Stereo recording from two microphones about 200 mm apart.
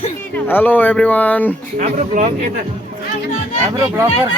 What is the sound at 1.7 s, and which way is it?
Speech, 40° right (ahead or behind).